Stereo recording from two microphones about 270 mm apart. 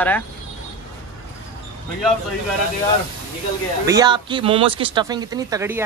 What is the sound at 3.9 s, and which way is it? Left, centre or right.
Speech, centre.